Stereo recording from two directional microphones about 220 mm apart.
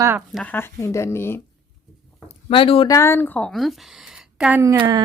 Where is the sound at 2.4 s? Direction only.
25° left (ahead or behind).